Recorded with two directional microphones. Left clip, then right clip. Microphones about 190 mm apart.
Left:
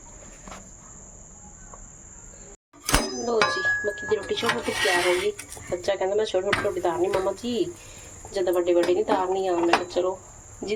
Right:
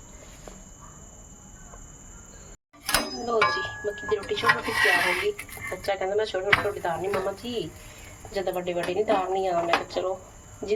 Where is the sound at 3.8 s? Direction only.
25° left (ahead or behind).